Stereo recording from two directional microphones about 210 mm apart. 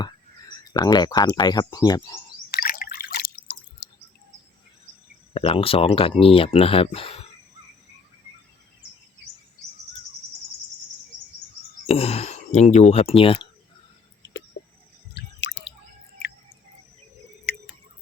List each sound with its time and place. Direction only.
0.0 s speech: 20° left (ahead or behind)
2.5 s drip: 40° left (ahead or behind)
3.8 s a sound: 50° left (ahead or behind)
5.3 s speech: 25° left (ahead or behind)
11.9 s speech: 30° left (ahead or behind)
15.1 s drip: 60° left (ahead or behind)
17.5 s squish: 45° left (ahead or behind)